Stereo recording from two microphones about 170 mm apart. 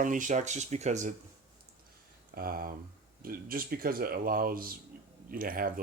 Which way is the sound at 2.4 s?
60° right (ahead or behind).